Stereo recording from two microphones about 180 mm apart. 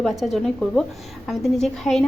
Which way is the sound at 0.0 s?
Centre (ahead or behind).